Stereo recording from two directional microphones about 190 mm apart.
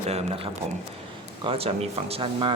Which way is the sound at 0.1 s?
35° right (ahead or behind).